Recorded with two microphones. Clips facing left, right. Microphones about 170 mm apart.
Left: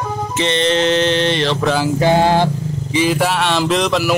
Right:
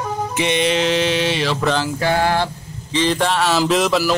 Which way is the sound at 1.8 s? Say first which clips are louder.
Left 5 dB; 20° left (ahead or behind).